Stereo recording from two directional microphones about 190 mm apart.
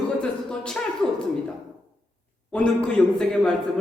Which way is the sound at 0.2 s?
5° left (ahead or behind).